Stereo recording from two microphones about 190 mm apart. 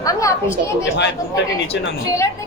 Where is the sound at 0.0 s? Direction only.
15° left (ahead or behind).